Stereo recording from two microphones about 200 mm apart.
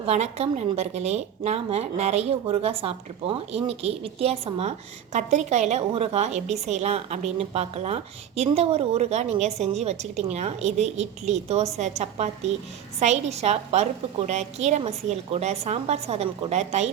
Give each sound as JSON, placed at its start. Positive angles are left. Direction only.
{"t": 0.0, "sound": "a woman's voice", "side_deg": -30}